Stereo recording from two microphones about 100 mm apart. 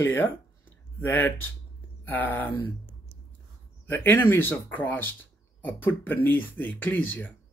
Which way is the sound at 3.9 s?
20° left (ahead or behind).